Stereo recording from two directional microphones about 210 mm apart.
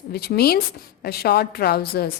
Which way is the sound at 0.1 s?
50° left (ahead or behind).